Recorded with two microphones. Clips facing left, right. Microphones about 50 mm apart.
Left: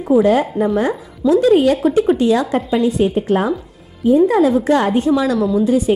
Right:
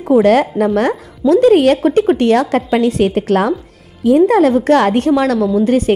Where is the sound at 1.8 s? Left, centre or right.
Right.